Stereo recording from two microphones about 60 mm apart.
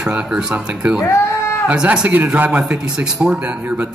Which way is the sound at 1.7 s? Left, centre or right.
Centre.